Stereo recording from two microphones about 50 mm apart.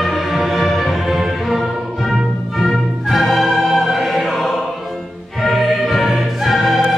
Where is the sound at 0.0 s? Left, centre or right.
Centre.